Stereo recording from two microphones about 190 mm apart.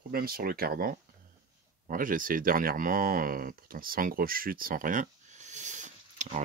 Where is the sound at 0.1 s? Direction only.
50° right (ahead or behind).